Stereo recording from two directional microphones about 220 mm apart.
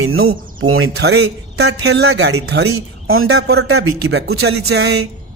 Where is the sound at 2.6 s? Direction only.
70° right (ahead or behind).